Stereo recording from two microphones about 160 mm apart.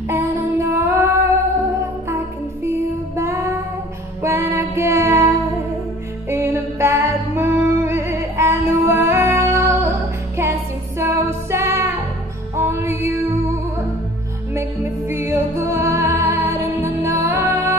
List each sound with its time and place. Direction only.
0.1 s music: 20° right (ahead or behind)
4.2 s music: 15° right (ahead or behind)
6.2 s music: 15° right (ahead or behind)
14.5 s music: 15° right (ahead or behind)